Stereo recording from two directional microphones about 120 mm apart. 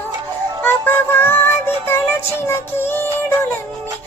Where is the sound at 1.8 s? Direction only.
20° left (ahead or behind).